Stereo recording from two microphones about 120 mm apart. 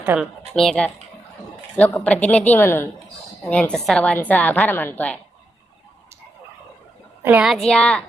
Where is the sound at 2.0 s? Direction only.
10° left (ahead or behind).